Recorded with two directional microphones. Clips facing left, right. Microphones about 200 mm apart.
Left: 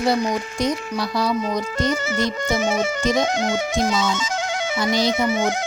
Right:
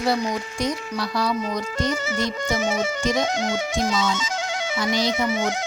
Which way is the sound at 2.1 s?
70° left (ahead or behind).